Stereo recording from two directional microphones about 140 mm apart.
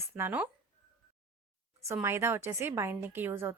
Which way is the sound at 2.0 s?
15° right (ahead or behind).